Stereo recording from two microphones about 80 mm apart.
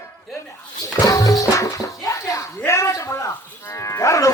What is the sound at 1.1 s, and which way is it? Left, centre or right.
Music, left.